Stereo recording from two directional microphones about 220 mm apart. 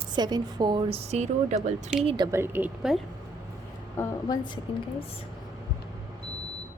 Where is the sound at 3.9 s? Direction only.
15° left (ahead or behind).